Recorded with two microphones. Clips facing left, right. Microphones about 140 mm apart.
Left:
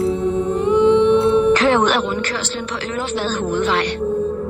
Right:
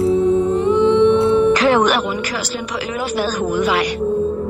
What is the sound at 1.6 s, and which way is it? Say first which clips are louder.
Music: right 1 dB; 10° right (ahead or behind).